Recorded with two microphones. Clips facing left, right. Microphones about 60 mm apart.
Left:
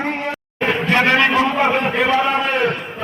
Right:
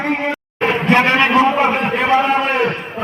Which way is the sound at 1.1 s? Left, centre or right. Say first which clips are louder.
Right 3 dB; centre.